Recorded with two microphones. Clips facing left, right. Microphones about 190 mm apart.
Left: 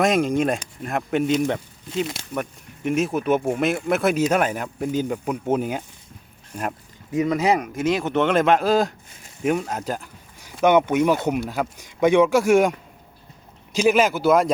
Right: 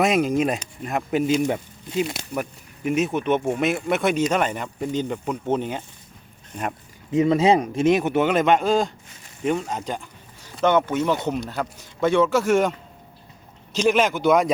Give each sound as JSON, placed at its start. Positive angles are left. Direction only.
{"t": 0.0, "sound": "speech", "side_deg": -5}
{"t": 7.1, "sound": "speech", "side_deg": -25}
{"t": 8.1, "sound": "a man's voice", "side_deg": -5}
{"t": 13.7, "sound": "a man's voice", "side_deg": 5}